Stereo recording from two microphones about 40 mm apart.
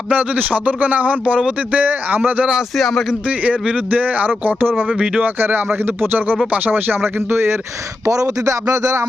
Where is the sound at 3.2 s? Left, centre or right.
Right.